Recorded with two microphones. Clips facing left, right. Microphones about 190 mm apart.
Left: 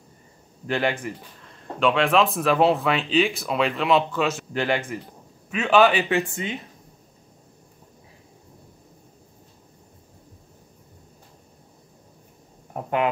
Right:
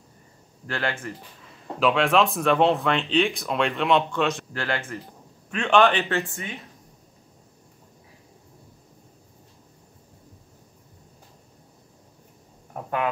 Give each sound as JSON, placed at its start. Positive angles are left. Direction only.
{"t": 0.7, "sound": "speech", "side_deg": 15}
{"t": 1.4, "sound": "speech", "side_deg": -5}
{"t": 4.5, "sound": "speech", "side_deg": 15}
{"t": 5.5, "sound": "speech", "side_deg": 5}
{"t": 12.7, "sound": "a sound", "side_deg": 25}